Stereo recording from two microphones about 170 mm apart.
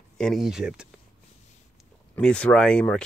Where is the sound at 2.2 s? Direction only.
5° left (ahead or behind).